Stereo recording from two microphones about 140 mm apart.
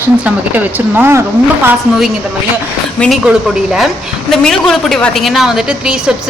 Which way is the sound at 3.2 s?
5° right (ahead or behind).